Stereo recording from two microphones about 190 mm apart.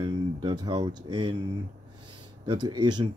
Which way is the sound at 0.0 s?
25° right (ahead or behind).